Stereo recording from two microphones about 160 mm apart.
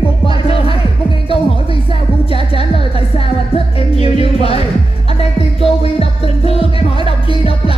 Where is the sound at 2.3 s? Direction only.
35° left (ahead or behind).